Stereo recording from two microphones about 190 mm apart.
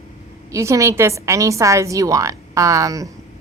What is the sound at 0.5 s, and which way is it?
A woman's voice, 15° right (ahead or behind).